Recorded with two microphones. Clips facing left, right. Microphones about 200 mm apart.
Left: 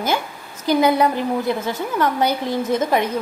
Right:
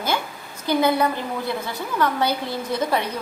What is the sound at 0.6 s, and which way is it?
Speech, 15° left (ahead or behind).